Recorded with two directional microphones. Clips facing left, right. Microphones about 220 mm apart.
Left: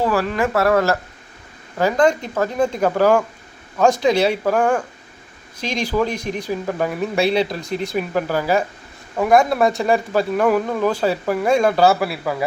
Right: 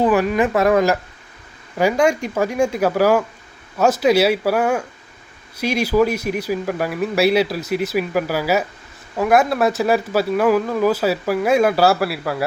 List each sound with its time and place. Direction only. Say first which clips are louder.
0.0 s speech: right 3 dB; 20° right (ahead or behind)